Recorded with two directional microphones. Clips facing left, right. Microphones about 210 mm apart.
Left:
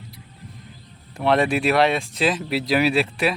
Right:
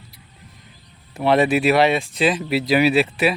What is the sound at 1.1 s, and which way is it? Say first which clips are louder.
Speech: right 3 dB; 5° right (ahead or behind).